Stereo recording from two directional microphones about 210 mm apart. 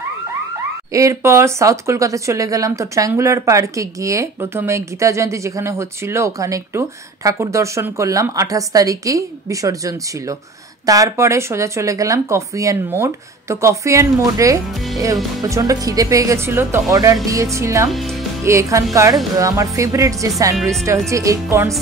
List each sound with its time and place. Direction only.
0.9 s speech: 15° right (ahead or behind)
17.9 s speech: centre (ahead or behind)
18.4 s speech: 15° right (ahead or behind)
20.5 s speech: centre (ahead or behind)
21.1 s speech: 15° right (ahead or behind)